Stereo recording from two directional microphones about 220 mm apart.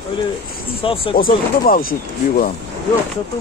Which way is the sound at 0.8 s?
25° left (ahead or behind).